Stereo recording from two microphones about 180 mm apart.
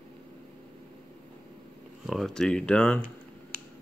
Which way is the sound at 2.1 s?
Centre (ahead or behind).